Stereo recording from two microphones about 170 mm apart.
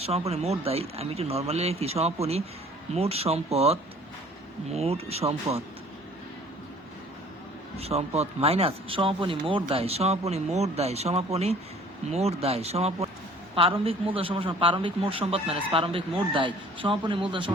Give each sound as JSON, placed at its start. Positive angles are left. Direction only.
{"t": 0.0, "sound": "speech", "side_deg": -35}
{"t": 7.8, "sound": "speech", "side_deg": -35}